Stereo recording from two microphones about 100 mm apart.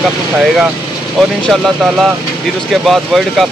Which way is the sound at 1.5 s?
Centre (ahead or behind).